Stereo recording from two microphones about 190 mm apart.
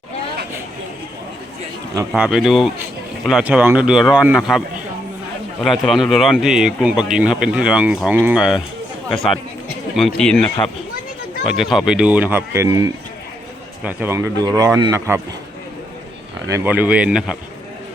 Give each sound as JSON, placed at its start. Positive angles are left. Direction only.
{"t": 2.0, "sound": "speech", "side_deg": -5}
{"t": 5.6, "sound": "speech", "side_deg": 0}
{"t": 10.2, "sound": "speech", "side_deg": 5}
{"t": 16.5, "sound": "speech", "side_deg": -10}